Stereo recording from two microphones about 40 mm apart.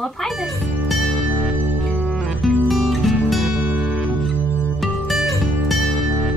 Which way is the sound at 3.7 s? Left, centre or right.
Right.